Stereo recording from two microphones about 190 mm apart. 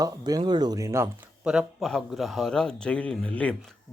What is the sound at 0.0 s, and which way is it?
Speech, 20° right (ahead or behind).